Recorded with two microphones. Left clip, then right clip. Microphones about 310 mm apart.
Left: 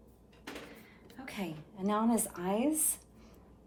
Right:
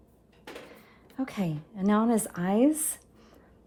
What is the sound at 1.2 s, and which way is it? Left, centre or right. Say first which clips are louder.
Speech: right 8 dB; right.